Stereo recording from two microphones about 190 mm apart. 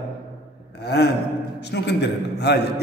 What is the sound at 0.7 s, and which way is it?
Gasp, 60° left (ahead or behind).